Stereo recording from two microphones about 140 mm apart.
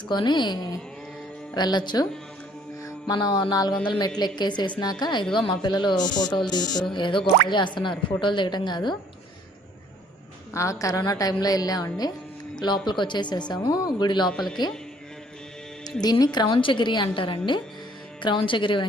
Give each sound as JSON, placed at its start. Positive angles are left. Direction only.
{"t": 0.1, "sound": "a woman's voice", "side_deg": 35}
{"t": 2.8, "sound": "mantra", "side_deg": 30}
{"t": 4.2, "sound": "a woman's voice", "side_deg": 30}
{"t": 10.5, "sound": "a woman's voice", "side_deg": 20}
{"t": 14.3, "sound": "speech", "side_deg": 0}
{"t": 16.0, "sound": "a woman's voice", "side_deg": 30}